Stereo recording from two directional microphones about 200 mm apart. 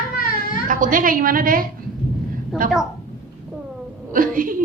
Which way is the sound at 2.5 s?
Centre (ahead or behind).